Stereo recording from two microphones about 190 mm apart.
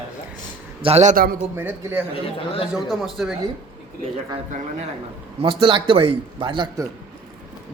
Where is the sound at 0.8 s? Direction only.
35° right (ahead or behind).